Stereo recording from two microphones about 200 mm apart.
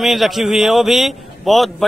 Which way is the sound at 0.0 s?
Centre (ahead or behind).